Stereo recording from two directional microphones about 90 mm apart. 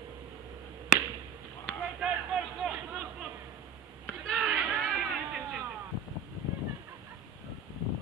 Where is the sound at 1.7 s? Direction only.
10° left (ahead or behind).